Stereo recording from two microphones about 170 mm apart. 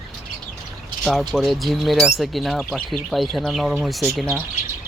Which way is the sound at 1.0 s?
Centre (ahead or behind).